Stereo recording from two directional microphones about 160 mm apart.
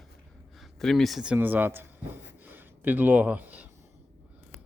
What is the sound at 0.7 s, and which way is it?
A man's voice, centre (ahead or behind).